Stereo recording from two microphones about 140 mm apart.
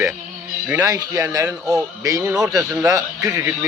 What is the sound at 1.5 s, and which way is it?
Speech, 5° right (ahead or behind).